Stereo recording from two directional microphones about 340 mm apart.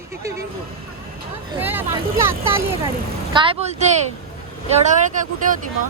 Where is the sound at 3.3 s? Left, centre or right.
Centre.